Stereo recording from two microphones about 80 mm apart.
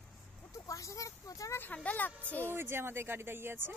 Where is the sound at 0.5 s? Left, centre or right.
Left.